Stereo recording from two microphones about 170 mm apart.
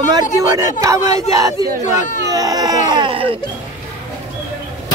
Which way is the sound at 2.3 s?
20° right (ahead or behind).